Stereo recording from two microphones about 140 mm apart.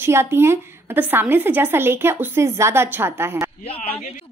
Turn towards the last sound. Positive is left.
turn(degrees=45)  # may be behind; listen again after turning